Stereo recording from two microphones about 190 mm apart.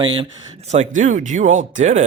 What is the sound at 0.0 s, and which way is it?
Speech, 25° right (ahead or behind).